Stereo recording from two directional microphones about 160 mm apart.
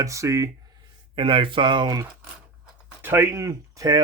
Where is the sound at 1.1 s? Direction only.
35° right (ahead or behind).